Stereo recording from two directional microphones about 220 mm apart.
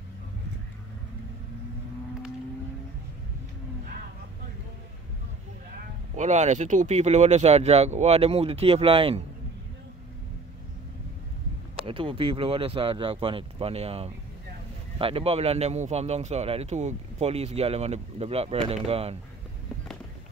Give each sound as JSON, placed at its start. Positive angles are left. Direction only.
{"t": 6.1, "sound": "a man's voice", "side_deg": -30}
{"t": 11.7, "sound": "a man's voice", "side_deg": -25}